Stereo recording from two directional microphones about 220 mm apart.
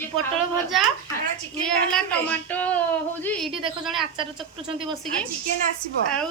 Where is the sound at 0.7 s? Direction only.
Centre (ahead or behind).